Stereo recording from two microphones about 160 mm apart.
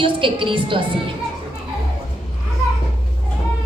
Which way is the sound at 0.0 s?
30° right (ahead or behind).